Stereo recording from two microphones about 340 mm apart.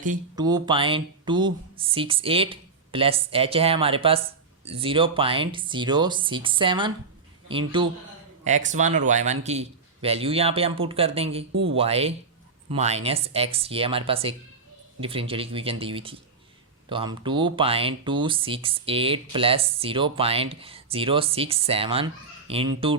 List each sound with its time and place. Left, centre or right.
0.3 s speech: centre
11.5 s speech: right
11.8 s speech: centre